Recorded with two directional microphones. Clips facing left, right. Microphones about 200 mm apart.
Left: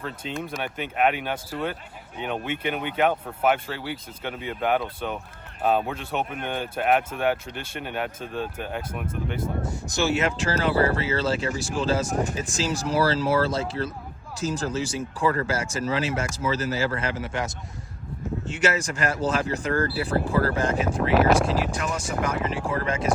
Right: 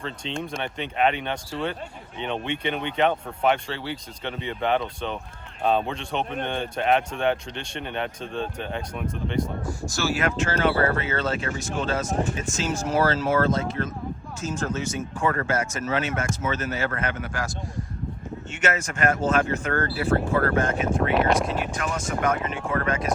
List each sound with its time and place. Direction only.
0.0 s speech: 5° left (ahead or behind)
9.6 s speech: 20° left (ahead or behind)
21.1 s speech: centre (ahead or behind)
21.7 s speech: 30° left (ahead or behind)